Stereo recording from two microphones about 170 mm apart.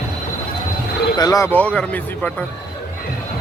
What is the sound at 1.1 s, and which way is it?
Speech, 20° left (ahead or behind).